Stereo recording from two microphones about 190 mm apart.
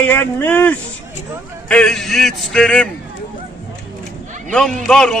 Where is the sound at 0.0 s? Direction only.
10° left (ahead or behind).